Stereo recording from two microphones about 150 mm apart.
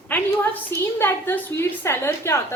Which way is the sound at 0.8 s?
15° left (ahead or behind).